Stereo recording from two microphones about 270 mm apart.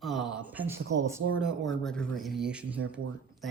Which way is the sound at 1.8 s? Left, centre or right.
Centre.